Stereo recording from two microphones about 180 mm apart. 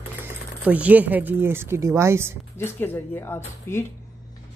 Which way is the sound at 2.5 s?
15° left (ahead or behind).